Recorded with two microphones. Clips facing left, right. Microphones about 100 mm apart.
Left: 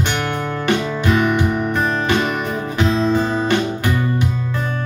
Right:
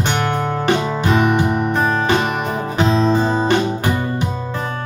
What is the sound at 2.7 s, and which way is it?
Music, 30° right (ahead or behind).